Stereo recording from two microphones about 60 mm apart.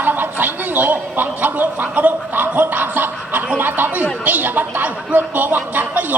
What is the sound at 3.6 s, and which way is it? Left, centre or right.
Speech, right.